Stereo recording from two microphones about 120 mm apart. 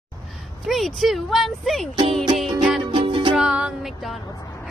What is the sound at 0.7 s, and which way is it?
Speech, centre (ahead or behind).